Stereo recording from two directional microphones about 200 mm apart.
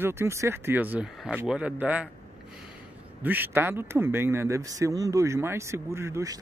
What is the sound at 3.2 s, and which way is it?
Speech, 10° right (ahead or behind).